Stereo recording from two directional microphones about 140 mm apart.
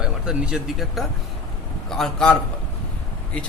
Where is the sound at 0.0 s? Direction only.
5° right (ahead or behind).